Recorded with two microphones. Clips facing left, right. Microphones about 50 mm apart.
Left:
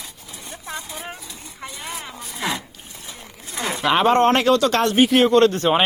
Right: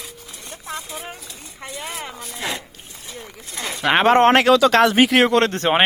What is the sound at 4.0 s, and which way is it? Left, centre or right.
A man's voice, right.